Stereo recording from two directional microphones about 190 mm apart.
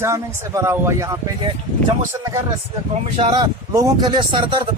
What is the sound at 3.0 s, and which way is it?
Speech, 25° right (ahead or behind).